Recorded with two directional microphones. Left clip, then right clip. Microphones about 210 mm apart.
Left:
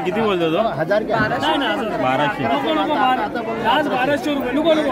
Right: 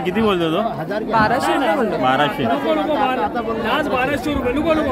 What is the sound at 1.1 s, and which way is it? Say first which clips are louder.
Speech: right 2 dB; 25° right (ahead or behind).